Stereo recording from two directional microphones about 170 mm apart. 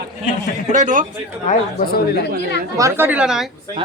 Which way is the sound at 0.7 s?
45° right (ahead or behind).